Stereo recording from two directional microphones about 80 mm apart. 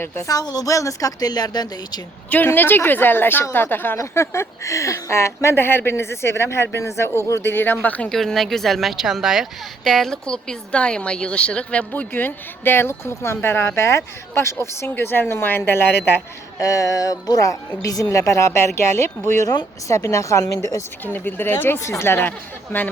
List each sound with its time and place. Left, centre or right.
0.0 s speech: left
0.3 s speech: left
2.3 s speech: left
8.1 s a woman's voice: centre; by 16.0 s left
16.6 s speech: left
21.0 s speech: left